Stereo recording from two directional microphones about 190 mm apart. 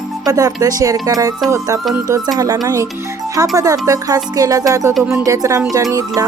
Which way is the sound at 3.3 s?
20° right (ahead or behind).